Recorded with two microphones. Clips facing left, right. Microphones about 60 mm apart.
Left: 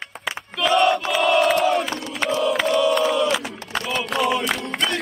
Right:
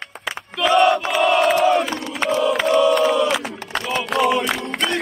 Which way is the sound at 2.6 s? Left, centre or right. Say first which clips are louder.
Right 4 dB; right.